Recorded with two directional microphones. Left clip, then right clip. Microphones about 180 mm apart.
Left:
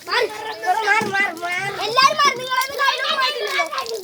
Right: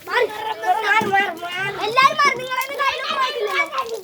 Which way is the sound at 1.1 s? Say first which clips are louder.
Right 1 dB; 25° right (ahead or behind).